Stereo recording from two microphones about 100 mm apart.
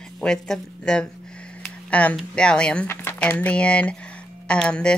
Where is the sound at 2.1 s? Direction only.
10° left (ahead or behind).